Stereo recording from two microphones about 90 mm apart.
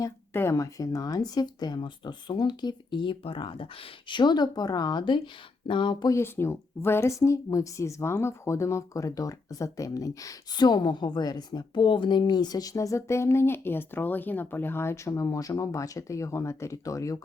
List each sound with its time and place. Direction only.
0.3 s speech: 30° left (ahead or behind); by 6.1 s 65° left (ahead or behind)
6.1 s a woman's voice: 30° left (ahead or behind)
10.6 s a woman's voice: 55° left (ahead or behind); by 17.2 s 35° left (ahead or behind)